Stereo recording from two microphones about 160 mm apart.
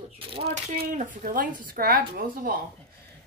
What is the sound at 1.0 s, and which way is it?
A woman's voice, 55° right (ahead or behind).